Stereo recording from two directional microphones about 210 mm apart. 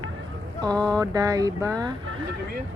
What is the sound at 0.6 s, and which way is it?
Speech, 20° right (ahead or behind).